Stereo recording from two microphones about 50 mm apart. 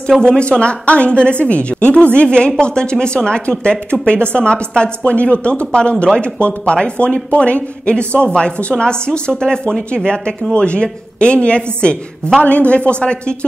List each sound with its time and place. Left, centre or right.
0.2 s a woman's voice: centre